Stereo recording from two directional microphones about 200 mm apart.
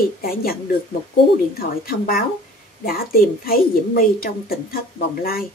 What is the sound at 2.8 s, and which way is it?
A woman's voice, 45° left (ahead or behind).